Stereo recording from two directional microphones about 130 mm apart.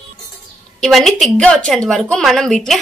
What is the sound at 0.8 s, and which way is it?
A woman's voice, centre (ahead or behind).